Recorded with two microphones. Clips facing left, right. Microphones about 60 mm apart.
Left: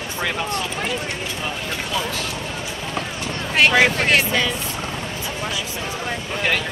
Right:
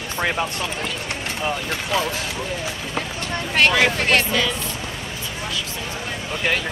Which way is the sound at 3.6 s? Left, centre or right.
Centre.